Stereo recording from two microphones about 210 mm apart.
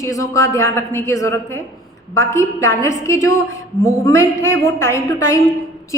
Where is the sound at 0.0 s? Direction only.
15° left (ahead or behind).